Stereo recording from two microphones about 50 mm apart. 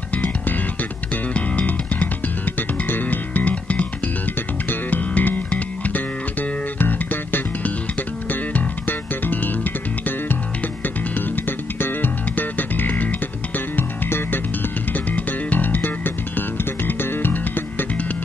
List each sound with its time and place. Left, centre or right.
0.1 s music: left
11.8 s music: left
15.1 s music: left